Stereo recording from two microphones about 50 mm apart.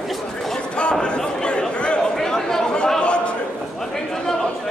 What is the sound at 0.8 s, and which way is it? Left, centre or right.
Chatter, centre.